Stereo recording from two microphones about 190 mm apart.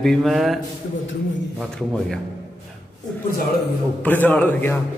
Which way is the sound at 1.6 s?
Centre (ahead or behind).